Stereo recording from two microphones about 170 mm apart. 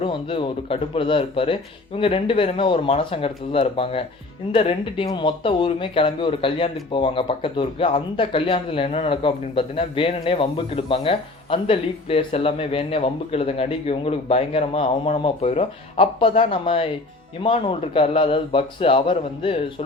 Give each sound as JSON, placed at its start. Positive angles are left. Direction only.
{"t": 0.0, "sound": "speech", "side_deg": 30}